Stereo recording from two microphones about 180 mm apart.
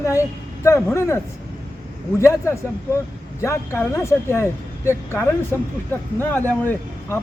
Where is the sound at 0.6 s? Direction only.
15° left (ahead or behind).